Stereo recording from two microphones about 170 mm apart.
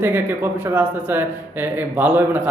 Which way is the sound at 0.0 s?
10° right (ahead or behind).